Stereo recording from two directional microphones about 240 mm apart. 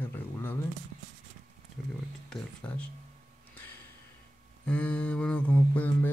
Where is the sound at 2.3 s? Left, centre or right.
Centre.